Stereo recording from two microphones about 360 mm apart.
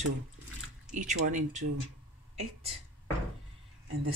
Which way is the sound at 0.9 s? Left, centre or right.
Right.